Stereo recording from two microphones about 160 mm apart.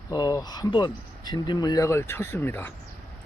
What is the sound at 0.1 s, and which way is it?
Speech, 25° left (ahead or behind).